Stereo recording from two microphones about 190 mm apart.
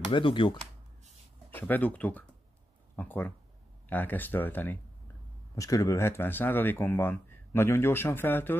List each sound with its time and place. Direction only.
0.1 s speech: 25° left (ahead or behind)
1.5 s speech: 10° left (ahead or behind)